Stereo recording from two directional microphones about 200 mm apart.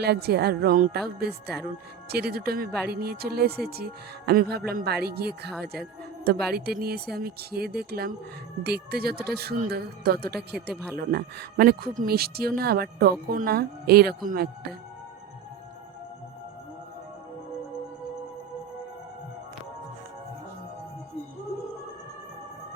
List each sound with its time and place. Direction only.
0.0 s speech: 55° right (ahead or behind)
2.0 s speech: 50° right (ahead or behind)